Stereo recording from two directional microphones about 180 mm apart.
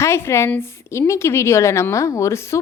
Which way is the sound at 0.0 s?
15° left (ahead or behind).